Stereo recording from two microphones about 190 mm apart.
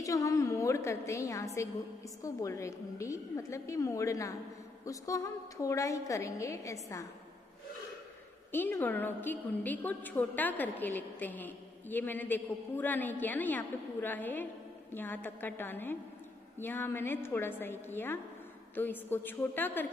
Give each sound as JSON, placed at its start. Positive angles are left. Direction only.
{"t": 0.0, "sound": "a woman's voice", "side_deg": 15}
{"t": 8.5, "sound": "a woman's voice", "side_deg": 10}